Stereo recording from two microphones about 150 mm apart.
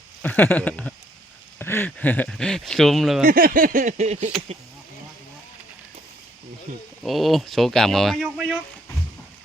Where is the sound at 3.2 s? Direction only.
70° right (ahead or behind); by 4.3 s 50° right (ahead or behind).